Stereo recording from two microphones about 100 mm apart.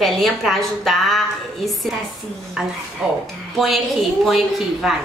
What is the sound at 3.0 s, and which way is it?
A woman's voice, 10° right (ahead or behind).